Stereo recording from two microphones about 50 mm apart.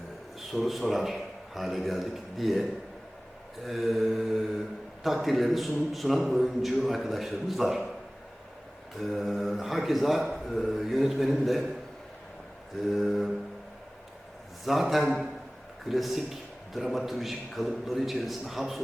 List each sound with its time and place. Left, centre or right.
0.3 s a man's voice: centre
9.0 s a man's voice: centre
12.9 s a man's voice: centre
14.6 s a man's voice: centre